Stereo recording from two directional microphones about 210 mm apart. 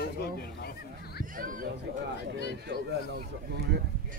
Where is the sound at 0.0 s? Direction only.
50° left (ahead or behind).